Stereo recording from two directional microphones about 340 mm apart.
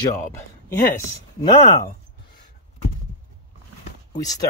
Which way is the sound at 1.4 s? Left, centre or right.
Centre.